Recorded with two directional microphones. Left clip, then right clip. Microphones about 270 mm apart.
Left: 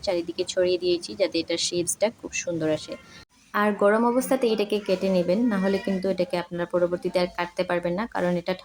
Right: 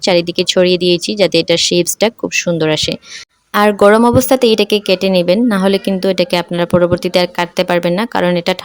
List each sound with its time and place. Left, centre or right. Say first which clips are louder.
0.0 s speech: right 14 dB; right